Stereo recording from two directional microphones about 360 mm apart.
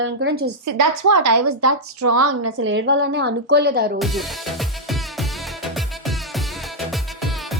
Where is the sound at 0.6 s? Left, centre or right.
Right.